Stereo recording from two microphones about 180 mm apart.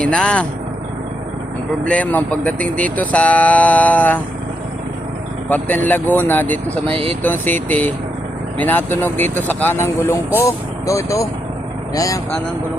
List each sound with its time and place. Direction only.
0.0 s speech: 5° left (ahead or behind)
1.8 s speech: 10° left (ahead or behind)
5.5 s speech: 10° left (ahead or behind)
6.8 s speech: 30° right (ahead or behind)
7.2 s speech: 10° left (ahead or behind)